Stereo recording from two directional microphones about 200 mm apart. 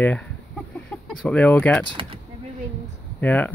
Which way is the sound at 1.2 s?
5° left (ahead or behind).